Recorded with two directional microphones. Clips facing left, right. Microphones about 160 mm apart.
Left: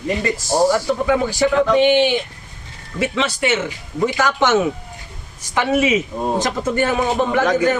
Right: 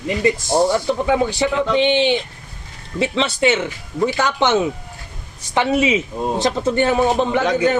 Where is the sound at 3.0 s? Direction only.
25° right (ahead or behind).